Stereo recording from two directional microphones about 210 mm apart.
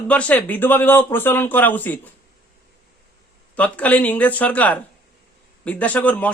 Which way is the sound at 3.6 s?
5° left (ahead or behind).